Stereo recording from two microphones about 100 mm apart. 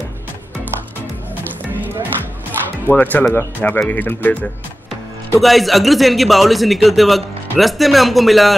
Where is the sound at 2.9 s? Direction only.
15° left (ahead or behind).